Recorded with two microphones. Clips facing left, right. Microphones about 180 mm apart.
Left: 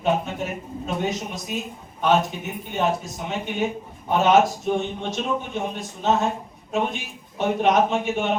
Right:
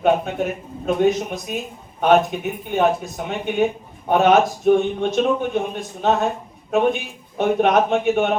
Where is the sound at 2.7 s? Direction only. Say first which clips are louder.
Right 5 dB; 55° right (ahead or behind).